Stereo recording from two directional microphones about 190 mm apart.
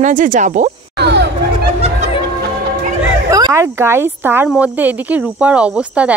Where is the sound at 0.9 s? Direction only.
60° right (ahead or behind).